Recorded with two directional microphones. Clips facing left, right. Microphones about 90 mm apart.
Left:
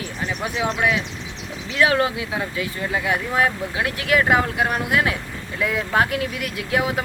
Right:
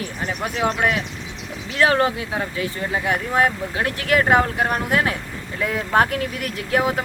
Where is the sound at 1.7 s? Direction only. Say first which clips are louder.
Right 1 dB; 40° right (ahead or behind).